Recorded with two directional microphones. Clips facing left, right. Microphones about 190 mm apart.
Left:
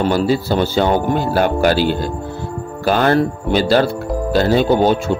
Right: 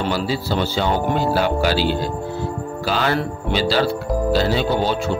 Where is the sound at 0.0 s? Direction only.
50° left (ahead or behind).